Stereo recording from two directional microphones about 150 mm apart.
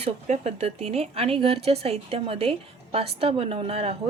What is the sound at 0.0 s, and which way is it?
A woman's voice, 45° right (ahead or behind).